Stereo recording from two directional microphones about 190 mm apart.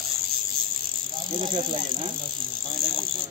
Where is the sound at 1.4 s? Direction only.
25° right (ahead or behind).